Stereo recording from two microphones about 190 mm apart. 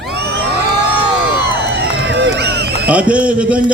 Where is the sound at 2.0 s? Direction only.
70° right (ahead or behind).